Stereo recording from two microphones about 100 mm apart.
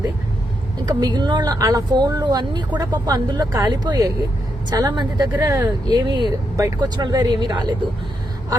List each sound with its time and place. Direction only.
0.9 s speech: 40° right (ahead or behind)
5.4 s speech: 30° right (ahead or behind)
5.9 s speech: 45° right (ahead or behind)